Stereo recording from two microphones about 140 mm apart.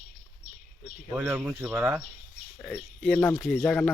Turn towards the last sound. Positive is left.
turn(degrees=5)  # may be behind; listen again after turning